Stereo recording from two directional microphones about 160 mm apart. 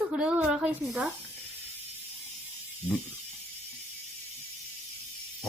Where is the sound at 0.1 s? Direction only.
5° right (ahead or behind).